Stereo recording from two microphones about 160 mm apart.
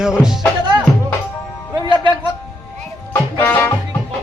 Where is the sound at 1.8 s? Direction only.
30° right (ahead or behind).